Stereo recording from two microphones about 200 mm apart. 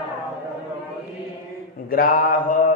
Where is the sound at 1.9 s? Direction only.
45° left (ahead or behind).